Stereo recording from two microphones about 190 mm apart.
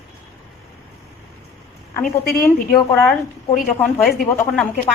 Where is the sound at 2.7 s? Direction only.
5° left (ahead or behind).